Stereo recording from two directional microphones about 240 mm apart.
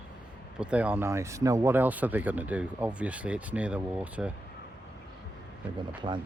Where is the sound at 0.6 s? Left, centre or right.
Centre.